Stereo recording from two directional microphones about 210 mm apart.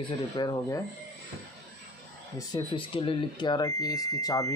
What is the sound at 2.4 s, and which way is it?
Speech, 20° left (ahead or behind).